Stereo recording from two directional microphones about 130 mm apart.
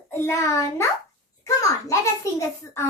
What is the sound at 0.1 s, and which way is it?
Child singing, 20° left (ahead or behind).